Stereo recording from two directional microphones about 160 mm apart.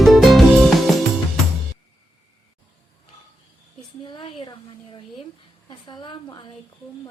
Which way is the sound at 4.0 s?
30° left (ahead or behind).